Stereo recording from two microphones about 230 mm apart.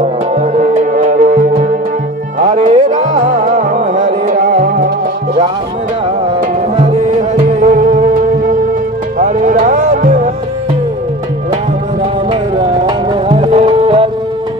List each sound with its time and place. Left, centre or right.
0.4 s music: right
6.8 s music: right
9.2 s music: right
12.3 s music: right